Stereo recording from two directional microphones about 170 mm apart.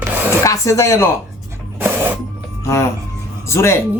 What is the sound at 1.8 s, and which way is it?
Printer, 10° right (ahead or behind).